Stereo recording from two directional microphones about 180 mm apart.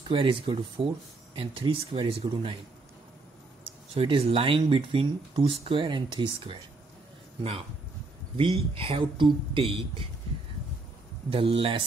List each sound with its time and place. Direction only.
0.1 s speech: 30° right (ahead or behind)
3.9 s speech: 30° right (ahead or behind)
8.4 s speech: 30° right (ahead or behind)
11.2 s speech: 30° right (ahead or behind)